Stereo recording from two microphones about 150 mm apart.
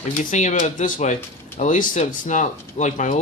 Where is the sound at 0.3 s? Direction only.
55° left (ahead or behind).